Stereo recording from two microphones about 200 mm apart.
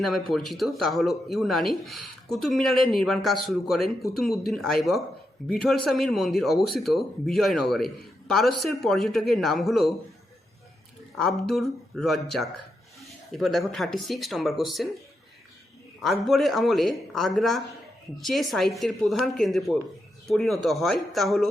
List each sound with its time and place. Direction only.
0.0 s speech: centre (ahead or behind)
11.1 s speech: centre (ahead or behind)
16.0 s speech: centre (ahead or behind)